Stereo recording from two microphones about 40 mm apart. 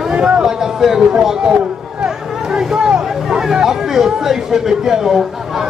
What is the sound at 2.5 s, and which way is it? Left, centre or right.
A man's voice, centre.